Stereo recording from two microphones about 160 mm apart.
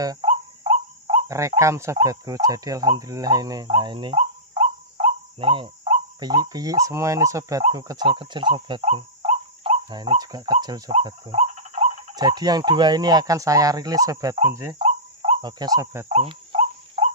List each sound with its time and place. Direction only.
0.2 s cricket: 40° right (ahead or behind)
1.2 s a sound: 20° right (ahead or behind)
1.6 s speech: 20° right (ahead or behind)
4.9 s bird: 35° right (ahead or behind)
6.1 s speech: 25° right (ahead or behind)
8.8 s cricket: 45° right (ahead or behind); by 10.1 s 25° right (ahead or behind)
10.2 s speech: 25° right (ahead or behind)
11.1 s speech: 35° right (ahead or behind); by 14.4 s 20° right (ahead or behind)
14.5 s cricket: 15° right (ahead or behind)
14.8 s cricket: 30° right (ahead or behind)
16.1 s cricket: 45° right (ahead or behind)